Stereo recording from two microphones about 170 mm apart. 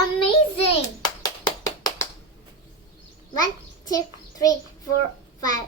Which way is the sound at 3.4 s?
20° left (ahead or behind).